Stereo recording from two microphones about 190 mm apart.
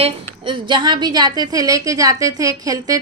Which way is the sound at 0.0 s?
25° right (ahead or behind).